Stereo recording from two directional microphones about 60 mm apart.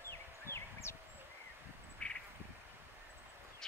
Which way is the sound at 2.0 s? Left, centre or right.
Left.